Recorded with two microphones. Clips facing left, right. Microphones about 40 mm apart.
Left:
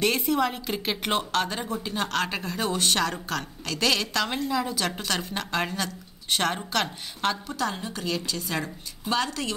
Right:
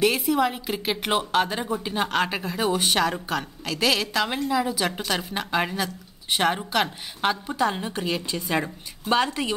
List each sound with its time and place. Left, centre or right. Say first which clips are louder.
0.0 s a woman's voice: right 3 dB; centre; by 9.5 s right